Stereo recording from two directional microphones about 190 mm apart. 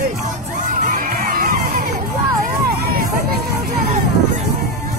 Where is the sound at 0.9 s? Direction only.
45° right (ahead or behind).